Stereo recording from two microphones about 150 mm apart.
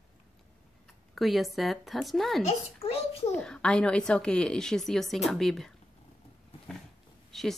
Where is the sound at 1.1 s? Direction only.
Centre (ahead or behind).